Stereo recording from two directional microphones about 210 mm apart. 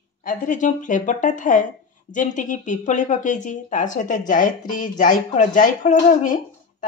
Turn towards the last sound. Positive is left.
turn(degrees=35)  # may be behind; listen again after turning